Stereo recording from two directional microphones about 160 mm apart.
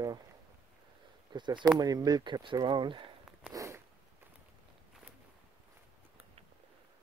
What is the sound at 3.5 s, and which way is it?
Zipper, 20° right (ahead or behind).